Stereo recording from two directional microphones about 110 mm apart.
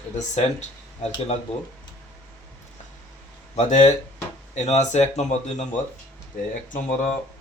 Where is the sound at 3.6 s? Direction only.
90° left.